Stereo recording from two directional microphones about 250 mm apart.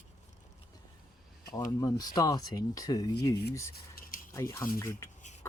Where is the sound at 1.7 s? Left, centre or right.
Centre.